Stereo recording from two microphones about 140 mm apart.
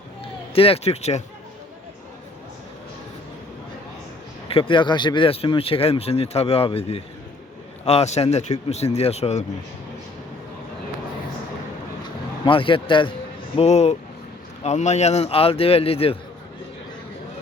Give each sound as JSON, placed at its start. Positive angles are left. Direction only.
{"t": 0.5, "sound": "speech", "side_deg": 45}
{"t": 4.4, "sound": "speech", "side_deg": 40}
{"t": 12.0, "sound": "speech", "side_deg": 40}
{"t": 13.6, "sound": "speech", "side_deg": 50}